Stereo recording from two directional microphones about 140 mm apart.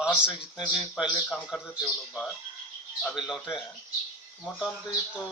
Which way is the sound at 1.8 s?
5° left (ahead or behind).